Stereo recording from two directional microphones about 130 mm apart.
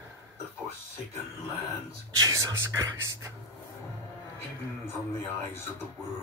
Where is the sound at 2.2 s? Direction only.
30° right (ahead or behind).